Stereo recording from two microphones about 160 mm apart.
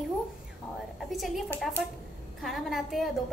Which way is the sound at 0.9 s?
Centre (ahead or behind).